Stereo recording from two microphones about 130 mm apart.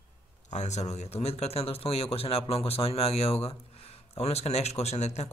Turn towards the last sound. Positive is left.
turn(degrees=60)  # may be behind; listen again after turning